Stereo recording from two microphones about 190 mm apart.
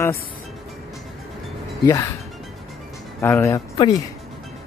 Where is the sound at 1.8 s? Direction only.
15° left (ahead or behind).